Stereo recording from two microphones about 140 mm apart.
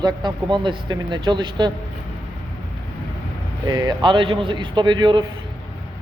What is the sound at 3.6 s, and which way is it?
A man's voice, 30° right (ahead or behind).